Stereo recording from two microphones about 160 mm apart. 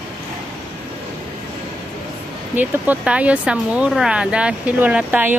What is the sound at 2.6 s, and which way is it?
Speech, 10° right (ahead or behind).